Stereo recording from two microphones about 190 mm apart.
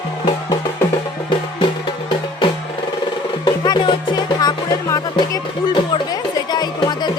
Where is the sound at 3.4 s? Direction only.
25° left (ahead or behind).